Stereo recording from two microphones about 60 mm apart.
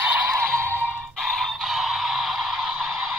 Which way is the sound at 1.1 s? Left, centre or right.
Centre.